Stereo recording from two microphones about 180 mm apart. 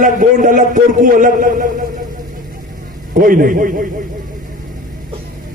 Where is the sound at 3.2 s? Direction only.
50° right (ahead or behind).